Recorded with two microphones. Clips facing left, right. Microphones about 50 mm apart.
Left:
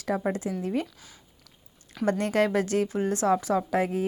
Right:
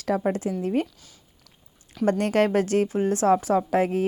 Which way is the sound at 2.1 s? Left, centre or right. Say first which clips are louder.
Right 3 dB; right.